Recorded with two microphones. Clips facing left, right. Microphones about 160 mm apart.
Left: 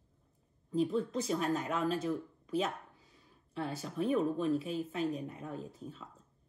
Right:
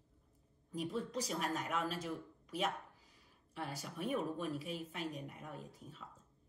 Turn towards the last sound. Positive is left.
turn(degrees=25)  # may be behind; listen again after turning